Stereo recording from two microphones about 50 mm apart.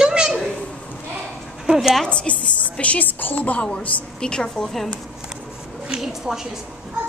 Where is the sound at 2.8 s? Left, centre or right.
Left.